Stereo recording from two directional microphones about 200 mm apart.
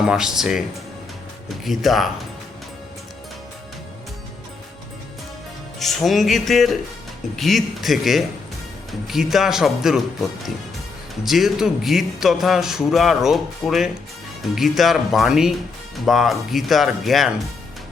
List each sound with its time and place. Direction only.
0.0 s a man's voice: 5° right (ahead or behind)
1.6 s a man's voice: centre (ahead or behind)
5.8 s a man's voice: centre (ahead or behind)
11.1 s a man's voice: centre (ahead or behind)